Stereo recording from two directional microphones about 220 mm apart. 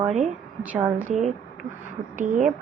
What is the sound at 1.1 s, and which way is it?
A woman's voice, 35° right (ahead or behind).